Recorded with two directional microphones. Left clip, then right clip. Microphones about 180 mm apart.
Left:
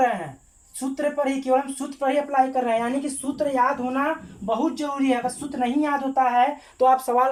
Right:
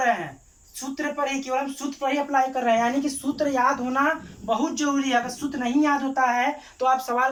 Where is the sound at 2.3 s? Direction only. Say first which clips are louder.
Right 3 dB; 20° left (ahead or behind).